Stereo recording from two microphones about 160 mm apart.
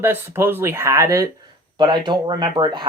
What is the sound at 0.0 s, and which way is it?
Speech, 15° right (ahead or behind).